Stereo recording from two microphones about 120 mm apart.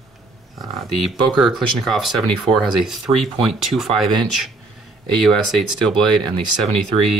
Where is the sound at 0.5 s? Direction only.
Centre (ahead or behind).